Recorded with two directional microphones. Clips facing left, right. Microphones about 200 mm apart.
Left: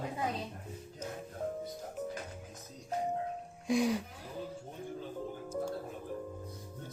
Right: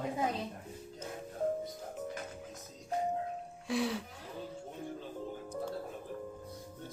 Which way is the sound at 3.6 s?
15° left (ahead or behind).